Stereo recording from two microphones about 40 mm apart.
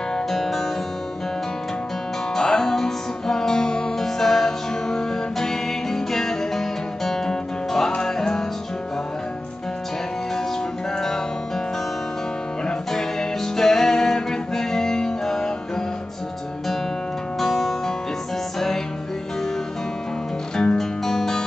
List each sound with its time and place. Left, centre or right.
0.1 s music: centre
2.3 s music: centre
11.0 s music: centre
12.6 s music: centre
17.4 s music: centre
20.5 s music: centre